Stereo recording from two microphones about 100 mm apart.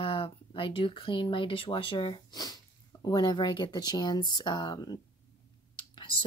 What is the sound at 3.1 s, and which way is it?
Speech, 50° left (ahead or behind).